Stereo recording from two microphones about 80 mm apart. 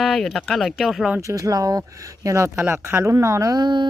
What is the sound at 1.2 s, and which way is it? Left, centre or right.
Speech, right.